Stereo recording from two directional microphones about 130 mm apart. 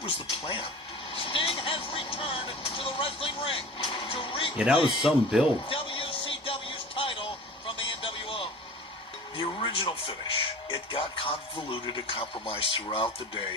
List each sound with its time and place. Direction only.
0.0 s speech: 40° left (ahead or behind)
4.5 s a man's voice: 10° right (ahead or behind)
5.6 s a sound: 45° left (ahead or behind)
9.6 s speech: 40° left (ahead or behind)